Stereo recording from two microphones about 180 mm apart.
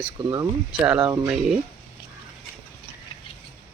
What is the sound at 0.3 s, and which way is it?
Speech, 15° right (ahead or behind).